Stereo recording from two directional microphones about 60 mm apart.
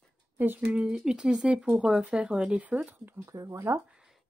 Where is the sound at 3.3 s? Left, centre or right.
Right.